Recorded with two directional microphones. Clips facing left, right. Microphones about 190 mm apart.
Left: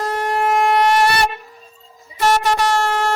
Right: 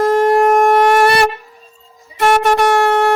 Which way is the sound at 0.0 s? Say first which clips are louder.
Right 9 dB; 50° right (ahead or behind).